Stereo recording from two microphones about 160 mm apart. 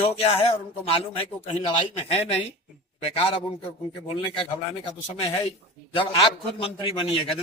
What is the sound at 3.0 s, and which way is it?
A man's voice, 35° left (ahead or behind).